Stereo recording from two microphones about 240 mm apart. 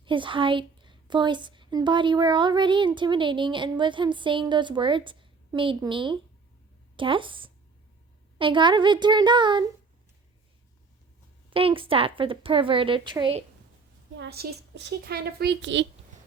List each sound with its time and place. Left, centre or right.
0.0 s a woman's voice: right
11.5 s a woman's voice: right
14.2 s speech: right